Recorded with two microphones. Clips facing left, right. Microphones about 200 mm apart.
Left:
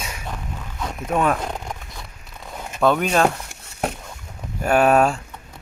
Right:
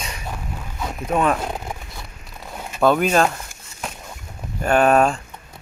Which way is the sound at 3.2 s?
60° left (ahead or behind).